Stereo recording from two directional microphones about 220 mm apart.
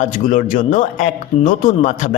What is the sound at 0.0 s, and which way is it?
A man's voice, 35° left (ahead or behind).